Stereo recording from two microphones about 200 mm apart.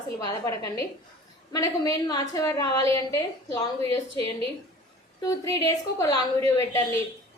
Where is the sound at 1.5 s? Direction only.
15° left (ahead or behind).